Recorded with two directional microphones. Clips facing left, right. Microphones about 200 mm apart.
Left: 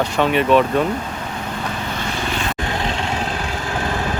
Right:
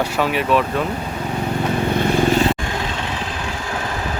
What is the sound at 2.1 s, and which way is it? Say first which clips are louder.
Vehicle: right 9 dB; 45° right (ahead or behind).